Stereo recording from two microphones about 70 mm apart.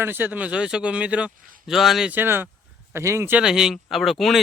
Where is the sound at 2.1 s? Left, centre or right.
Right.